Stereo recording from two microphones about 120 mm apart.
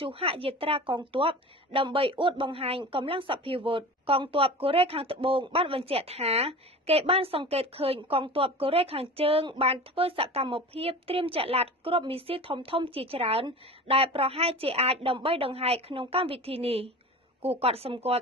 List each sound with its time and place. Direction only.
0.0 s speech: 50° right (ahead or behind)